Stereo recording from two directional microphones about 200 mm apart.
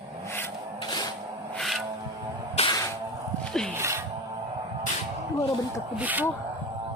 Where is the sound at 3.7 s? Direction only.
15° right (ahead or behind).